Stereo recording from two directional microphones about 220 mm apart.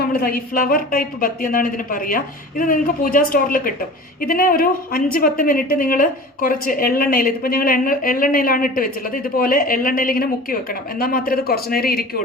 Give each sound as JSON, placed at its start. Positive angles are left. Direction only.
{"t": 0.0, "sound": "a woman's voice", "side_deg": 45}